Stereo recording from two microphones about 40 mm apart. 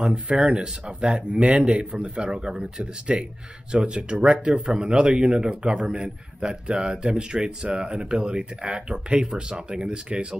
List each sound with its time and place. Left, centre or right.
0.0 s a man's voice: right